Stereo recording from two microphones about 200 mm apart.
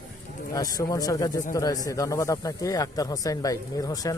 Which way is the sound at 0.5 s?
20° left (ahead or behind).